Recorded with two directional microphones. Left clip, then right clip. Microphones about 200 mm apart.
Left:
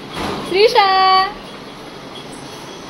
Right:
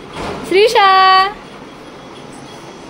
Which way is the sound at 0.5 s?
35° right (ahead or behind).